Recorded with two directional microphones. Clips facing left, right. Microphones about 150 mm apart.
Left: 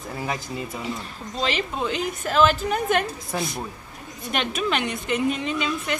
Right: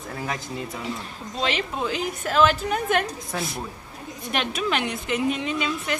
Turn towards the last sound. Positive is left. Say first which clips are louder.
# left 1 dB
turn(degrees=0)  # may be behind; listen again after turning